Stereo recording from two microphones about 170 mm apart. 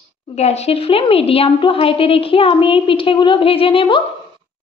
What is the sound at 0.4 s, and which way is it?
A woman's voice, 40° left (ahead or behind).